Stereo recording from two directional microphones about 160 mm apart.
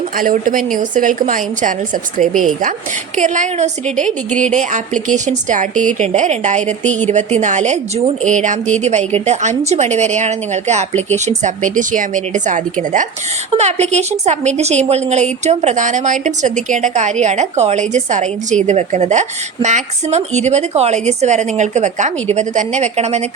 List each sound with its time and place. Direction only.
0.2 s a woman's voice: 60° right (ahead or behind); by 23.3 s 45° right (ahead or behind)